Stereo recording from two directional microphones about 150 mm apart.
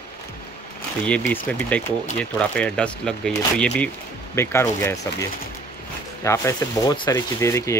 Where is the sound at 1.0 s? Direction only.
10° left (ahead or behind).